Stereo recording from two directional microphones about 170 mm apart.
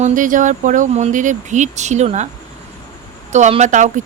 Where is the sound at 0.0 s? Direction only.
50° right (ahead or behind).